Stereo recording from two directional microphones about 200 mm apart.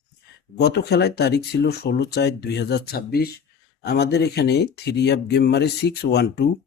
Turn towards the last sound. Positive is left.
turn(degrees=55)  # may be behind; listen again after turning